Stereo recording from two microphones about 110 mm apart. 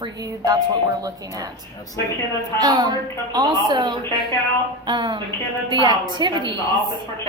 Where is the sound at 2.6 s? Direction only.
40° right (ahead or behind).